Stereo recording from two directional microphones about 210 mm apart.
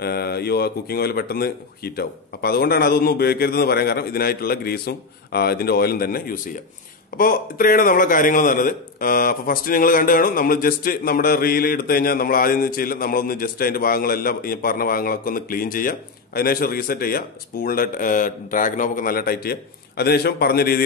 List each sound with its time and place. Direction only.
0.0 s a man's voice: 50° left (ahead or behind)